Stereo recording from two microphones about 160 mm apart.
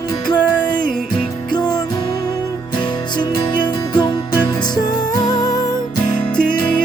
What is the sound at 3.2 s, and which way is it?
Music, 30° left (ahead or behind).